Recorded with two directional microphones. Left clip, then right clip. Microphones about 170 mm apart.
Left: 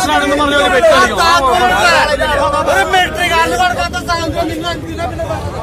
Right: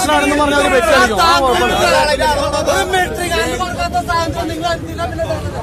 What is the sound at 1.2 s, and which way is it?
Speech, 65° right (ahead or behind).